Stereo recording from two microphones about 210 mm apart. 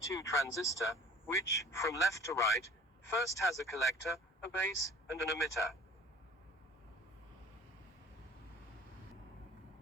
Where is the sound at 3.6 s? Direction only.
15° left (ahead or behind).